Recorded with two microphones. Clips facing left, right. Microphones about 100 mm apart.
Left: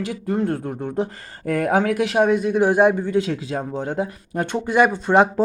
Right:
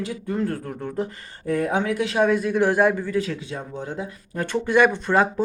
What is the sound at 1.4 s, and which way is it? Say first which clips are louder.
Speech: left 3 dB; 75° left (ahead or behind).